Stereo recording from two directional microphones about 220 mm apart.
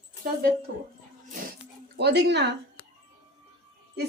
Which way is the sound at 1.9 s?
50° right (ahead or behind).